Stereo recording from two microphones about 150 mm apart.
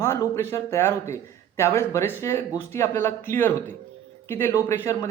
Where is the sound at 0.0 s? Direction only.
20° left (ahead or behind).